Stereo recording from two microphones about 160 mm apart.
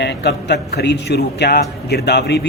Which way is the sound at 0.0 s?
90° left.